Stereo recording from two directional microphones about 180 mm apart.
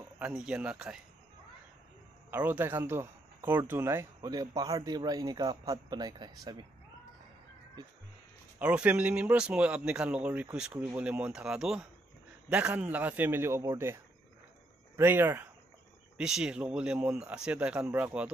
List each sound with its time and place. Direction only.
0.2 s speech: 5° right (ahead or behind)
2.3 s speech: 10° right (ahead or behind)
8.5 s speech: 5° right (ahead or behind)
15.0 s speech: 10° right (ahead or behind)